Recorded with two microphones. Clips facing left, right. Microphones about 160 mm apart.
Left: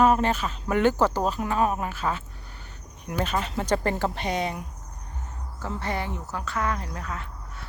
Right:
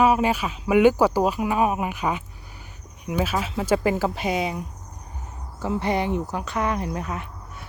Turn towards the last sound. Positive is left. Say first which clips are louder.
# right 2 dB
turn(degrees=-15)  # may be behind; listen again after turning